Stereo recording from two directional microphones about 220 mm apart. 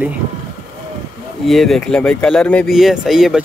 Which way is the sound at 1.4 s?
Centre (ahead or behind).